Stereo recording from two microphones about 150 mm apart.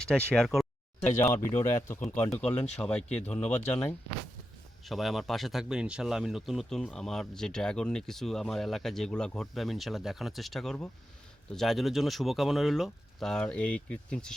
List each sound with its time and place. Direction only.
0.0 s speech: 5° left (ahead or behind)
1.0 s speech: 15° left (ahead or behind)